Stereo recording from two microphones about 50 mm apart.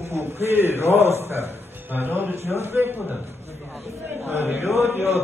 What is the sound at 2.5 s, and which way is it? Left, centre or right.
Speech, right.